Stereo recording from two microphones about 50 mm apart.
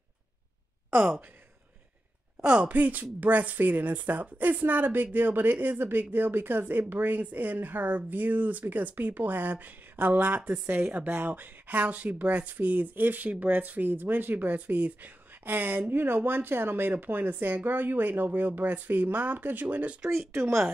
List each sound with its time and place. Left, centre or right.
2.4 s speech: centre
2.7 s speech: right
11.1 s speech: right